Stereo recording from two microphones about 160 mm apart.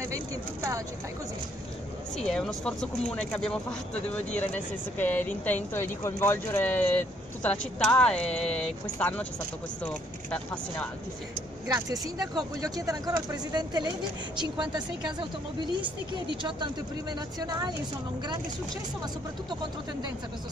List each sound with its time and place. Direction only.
2.1 s speech: 5° left (ahead or behind)
11.6 s a woman's voice: 20° right (ahead or behind)